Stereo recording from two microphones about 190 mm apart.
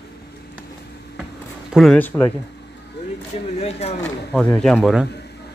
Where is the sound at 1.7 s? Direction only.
5° left (ahead or behind).